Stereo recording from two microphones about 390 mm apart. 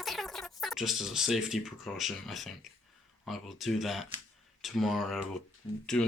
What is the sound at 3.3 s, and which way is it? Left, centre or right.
Speech, centre.